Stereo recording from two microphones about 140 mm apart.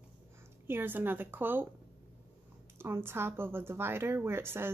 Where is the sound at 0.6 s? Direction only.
15° right (ahead or behind).